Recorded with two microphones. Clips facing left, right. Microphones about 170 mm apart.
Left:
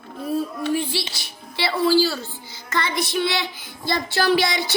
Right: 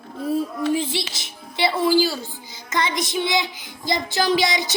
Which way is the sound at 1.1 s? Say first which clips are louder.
Even; 20° right (ahead or behind).